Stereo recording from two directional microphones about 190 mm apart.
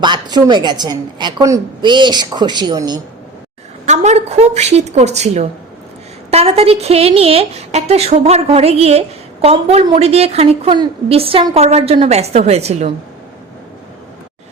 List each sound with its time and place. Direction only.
0.0 s a woman's voice: 20° right (ahead or behind)
3.8 s a woman's voice: 35° right (ahead or behind)